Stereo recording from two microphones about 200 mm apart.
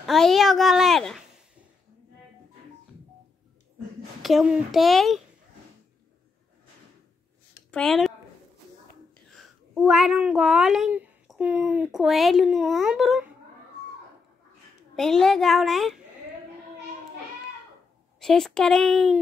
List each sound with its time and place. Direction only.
0.0 s speech: centre (ahead or behind)
4.2 s speech: centre (ahead or behind)
7.7 s speech: 5° left (ahead or behind)
9.3 s speech: centre (ahead or behind)
15.0 s speech: centre (ahead or behind)
18.2 s speech: centre (ahead or behind)